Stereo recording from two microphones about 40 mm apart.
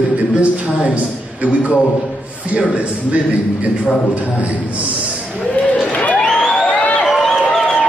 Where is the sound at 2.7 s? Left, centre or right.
Right.